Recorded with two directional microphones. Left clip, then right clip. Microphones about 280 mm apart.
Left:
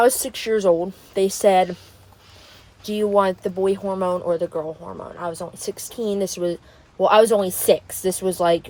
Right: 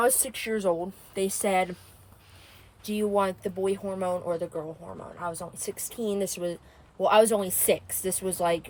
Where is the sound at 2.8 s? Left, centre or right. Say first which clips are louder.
Left 7 dB; centre.